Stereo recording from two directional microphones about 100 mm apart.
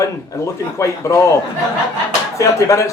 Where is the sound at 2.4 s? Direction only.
30° left (ahead or behind).